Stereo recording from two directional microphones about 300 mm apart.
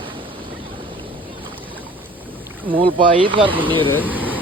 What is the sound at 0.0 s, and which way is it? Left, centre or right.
Boat, centre.